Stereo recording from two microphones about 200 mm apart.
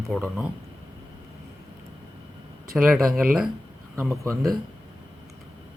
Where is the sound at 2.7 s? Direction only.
Centre (ahead or behind).